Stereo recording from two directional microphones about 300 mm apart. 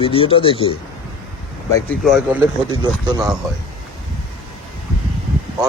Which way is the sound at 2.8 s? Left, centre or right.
Centre.